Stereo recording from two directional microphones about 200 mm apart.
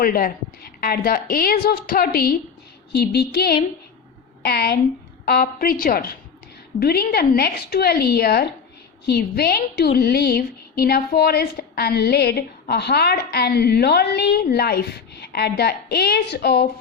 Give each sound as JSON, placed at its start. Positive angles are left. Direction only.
{"t": 0.0, "sound": "a woman's voice", "side_deg": 45}